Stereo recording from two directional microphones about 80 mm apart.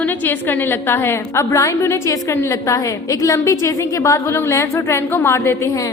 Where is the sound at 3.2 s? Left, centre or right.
Left.